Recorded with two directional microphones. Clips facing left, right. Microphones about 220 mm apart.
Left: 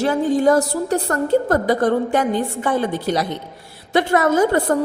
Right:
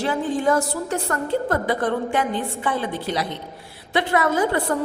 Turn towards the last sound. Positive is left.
turn(degrees=45)  # may be behind; listen again after turning